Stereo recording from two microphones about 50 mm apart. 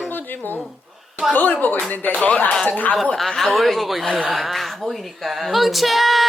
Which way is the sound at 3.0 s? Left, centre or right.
Centre.